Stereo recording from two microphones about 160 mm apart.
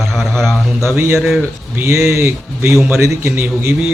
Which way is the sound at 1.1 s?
Centre (ahead or behind).